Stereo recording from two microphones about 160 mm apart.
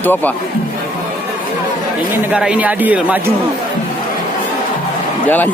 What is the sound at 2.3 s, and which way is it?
Speech, 5° right (ahead or behind).